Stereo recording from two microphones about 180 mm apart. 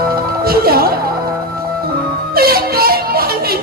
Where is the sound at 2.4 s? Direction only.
55° right (ahead or behind).